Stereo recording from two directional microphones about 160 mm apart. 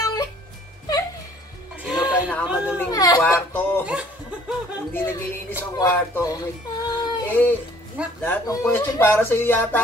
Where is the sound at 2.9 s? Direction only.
25° left (ahead or behind).